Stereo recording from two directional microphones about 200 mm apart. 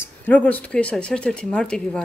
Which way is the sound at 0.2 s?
10° left (ahead or behind).